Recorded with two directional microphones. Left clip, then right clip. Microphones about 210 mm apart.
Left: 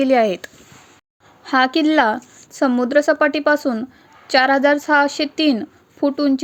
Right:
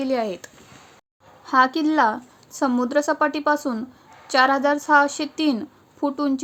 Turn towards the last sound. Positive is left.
turn(degrees=15)  # may be behind; listen again after turning